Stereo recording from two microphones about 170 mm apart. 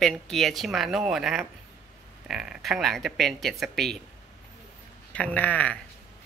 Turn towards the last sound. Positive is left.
turn(degrees=10)  # may be behind; listen again after turning